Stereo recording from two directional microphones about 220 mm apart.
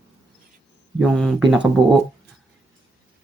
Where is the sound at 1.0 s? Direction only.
Centre (ahead or behind).